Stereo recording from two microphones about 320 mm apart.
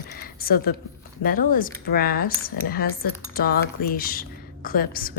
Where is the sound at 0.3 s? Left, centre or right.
Left.